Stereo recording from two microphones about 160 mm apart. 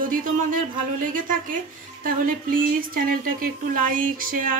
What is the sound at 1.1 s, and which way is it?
Speech, 55° right (ahead or behind).